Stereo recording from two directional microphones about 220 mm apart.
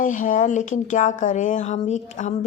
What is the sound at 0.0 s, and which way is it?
Speech, 35° left (ahead or behind).